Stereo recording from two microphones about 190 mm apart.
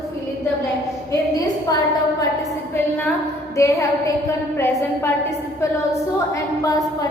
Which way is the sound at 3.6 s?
15° left (ahead or behind).